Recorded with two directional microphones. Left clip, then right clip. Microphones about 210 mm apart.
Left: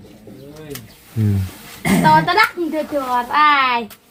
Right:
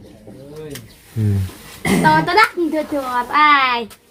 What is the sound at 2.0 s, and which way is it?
A woman's voice, 25° right (ahead or behind).